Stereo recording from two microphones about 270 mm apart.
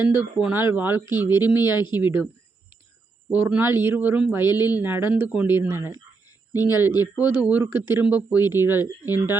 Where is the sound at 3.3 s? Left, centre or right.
Centre.